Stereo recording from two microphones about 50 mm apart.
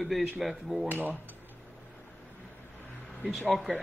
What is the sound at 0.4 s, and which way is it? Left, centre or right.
Speech, centre.